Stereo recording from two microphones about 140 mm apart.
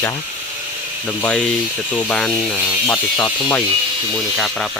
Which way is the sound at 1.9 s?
10° left (ahead or behind).